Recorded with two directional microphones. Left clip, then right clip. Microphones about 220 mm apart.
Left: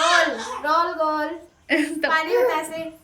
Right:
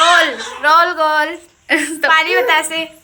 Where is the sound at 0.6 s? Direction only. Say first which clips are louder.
Right 10 dB; 25° right (ahead or behind).